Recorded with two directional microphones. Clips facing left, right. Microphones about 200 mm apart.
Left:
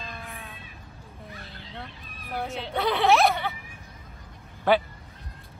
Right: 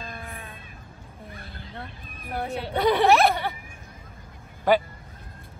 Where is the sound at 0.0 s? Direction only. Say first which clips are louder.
Right 2 dB; 50° right (ahead or behind).